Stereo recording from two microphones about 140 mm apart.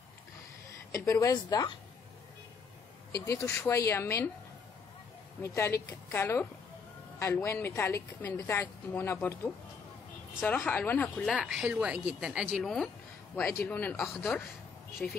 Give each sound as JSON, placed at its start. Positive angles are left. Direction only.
{"t": 0.7, "sound": "a woman's voice", "side_deg": 20}
{"t": 3.2, "sound": "speech", "side_deg": 20}
{"t": 5.4, "sound": "speech", "side_deg": 20}
{"t": 10.4, "sound": "a woman's voice", "side_deg": 5}
{"t": 11.3, "sound": "a woman's voice", "side_deg": -5}